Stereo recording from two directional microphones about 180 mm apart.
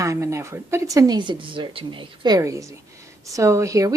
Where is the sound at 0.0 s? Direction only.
15° right (ahead or behind).